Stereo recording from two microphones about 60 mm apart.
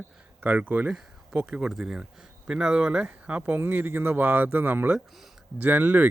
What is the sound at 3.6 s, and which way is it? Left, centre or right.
Speech, right.